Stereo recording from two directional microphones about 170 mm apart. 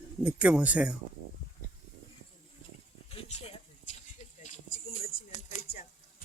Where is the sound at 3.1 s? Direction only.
35° left (ahead or behind).